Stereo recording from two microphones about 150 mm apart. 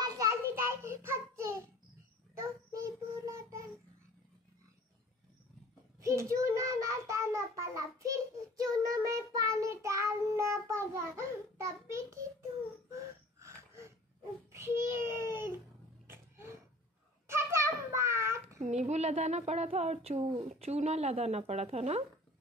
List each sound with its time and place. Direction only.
0.0 s child singing: 25° right (ahead or behind)
5.9 s child singing: 20° right (ahead or behind)
13.4 s wheeze: 20° right (ahead or behind)
14.5 s child singing: 15° right (ahead or behind)
16.1 s a sound: 15° right (ahead or behind)
18.6 s a woman's voice: 45° right (ahead or behind)